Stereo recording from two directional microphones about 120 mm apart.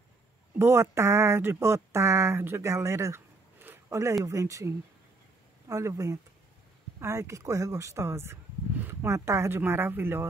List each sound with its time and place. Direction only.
0.6 s speech: 20° right (ahead or behind)